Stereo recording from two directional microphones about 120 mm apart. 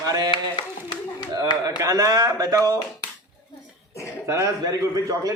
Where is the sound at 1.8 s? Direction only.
30° right (ahead or behind).